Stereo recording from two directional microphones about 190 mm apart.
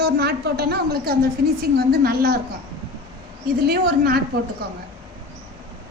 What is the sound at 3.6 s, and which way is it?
Speech, 55° right (ahead or behind).